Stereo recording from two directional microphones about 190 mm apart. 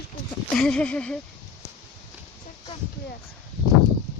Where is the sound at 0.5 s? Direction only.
5° left (ahead or behind).